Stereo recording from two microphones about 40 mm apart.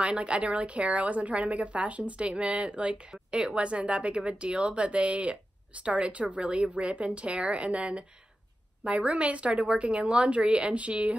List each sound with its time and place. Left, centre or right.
0.0 s a woman's voice: right